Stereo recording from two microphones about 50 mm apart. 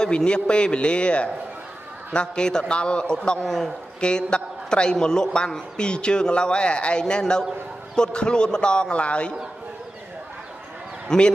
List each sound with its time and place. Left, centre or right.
0.0 s a man's voice: centre
11.1 s a man's voice: centre